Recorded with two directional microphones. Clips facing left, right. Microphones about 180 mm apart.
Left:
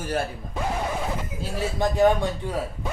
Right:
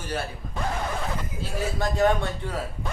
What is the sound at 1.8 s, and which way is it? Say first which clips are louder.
Speech: left 3 dB; 15° left (ahead or behind).